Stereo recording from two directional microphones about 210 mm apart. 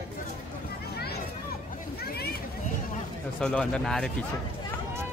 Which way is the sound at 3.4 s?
5° left (ahead or behind).